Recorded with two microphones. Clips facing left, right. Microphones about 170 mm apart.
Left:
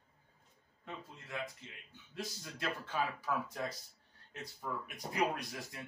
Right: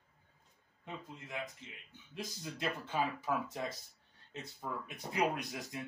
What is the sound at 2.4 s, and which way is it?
Speech, 20° right (ahead or behind).